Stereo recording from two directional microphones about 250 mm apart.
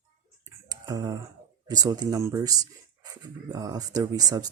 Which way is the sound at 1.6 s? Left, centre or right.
Centre.